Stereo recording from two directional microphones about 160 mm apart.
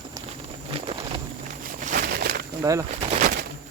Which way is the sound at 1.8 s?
55° right (ahead or behind).